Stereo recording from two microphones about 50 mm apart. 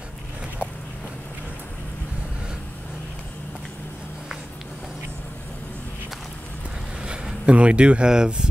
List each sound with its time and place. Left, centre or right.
7.4 s speech: right